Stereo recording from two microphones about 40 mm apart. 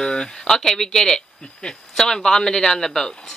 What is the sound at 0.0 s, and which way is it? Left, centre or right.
Speech, centre.